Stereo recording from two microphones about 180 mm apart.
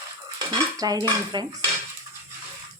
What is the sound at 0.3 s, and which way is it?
Dishes, 20° right (ahead or behind).